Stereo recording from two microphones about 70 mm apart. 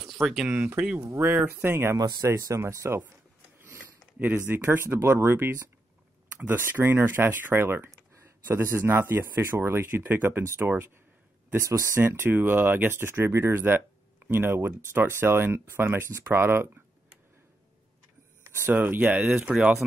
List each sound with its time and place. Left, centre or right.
0.0 s a sound: centre
0.5 s speech: right
1.1 s speech: right
2.0 s speech: right
2.2 s speech: right
4.5 s speech: right
11.6 s speech: right
12.1 s speech: right
16.3 s typing: right
18.7 s speech: right
19.1 s speech: centre